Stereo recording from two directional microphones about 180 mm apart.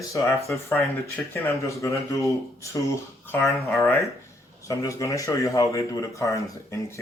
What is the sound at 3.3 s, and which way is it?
Speech, 10° left (ahead or behind).